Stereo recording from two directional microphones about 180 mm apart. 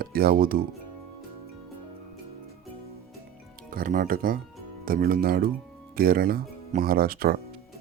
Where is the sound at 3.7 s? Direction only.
50° right (ahead or behind).